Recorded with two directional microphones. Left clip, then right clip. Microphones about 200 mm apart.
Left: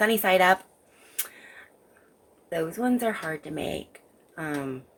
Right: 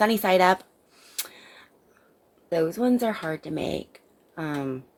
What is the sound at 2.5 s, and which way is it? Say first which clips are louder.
Speech: right 4 dB; 45° right (ahead or behind).